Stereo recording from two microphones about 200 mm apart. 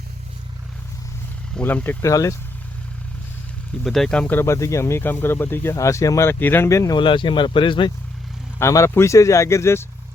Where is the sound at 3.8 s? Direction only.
Centre (ahead or behind); by 7.9 s 25° left (ahead or behind).